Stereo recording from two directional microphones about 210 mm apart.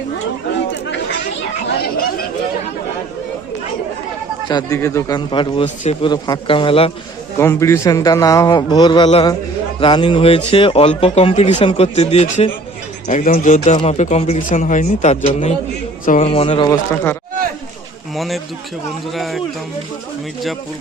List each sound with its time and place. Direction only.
4.4 s a man's voice: 15° left (ahead or behind)
7.3 s a man's voice: 10° left (ahead or behind)
16.6 s a man's voice: 10° left (ahead or behind)
18.1 s speech: centre (ahead or behind)